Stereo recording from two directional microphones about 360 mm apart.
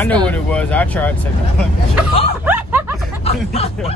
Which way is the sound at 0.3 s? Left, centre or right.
Centre.